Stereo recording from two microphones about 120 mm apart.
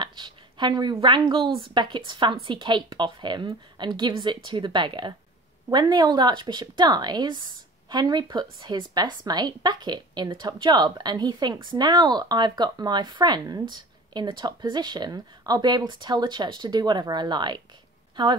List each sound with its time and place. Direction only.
0.0 s speech: 40° right (ahead or behind)